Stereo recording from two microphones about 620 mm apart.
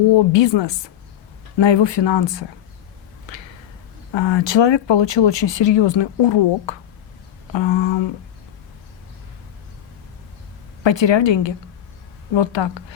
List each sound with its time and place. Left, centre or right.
0.1 s speech: left
4.1 s speech: left
10.8 s speech: left